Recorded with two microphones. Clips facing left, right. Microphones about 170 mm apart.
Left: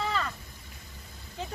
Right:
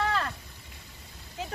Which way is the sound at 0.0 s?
Centre (ahead or behind).